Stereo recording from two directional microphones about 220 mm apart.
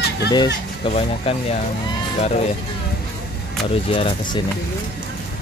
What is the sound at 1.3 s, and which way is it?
Speech, 25° left (ahead or behind).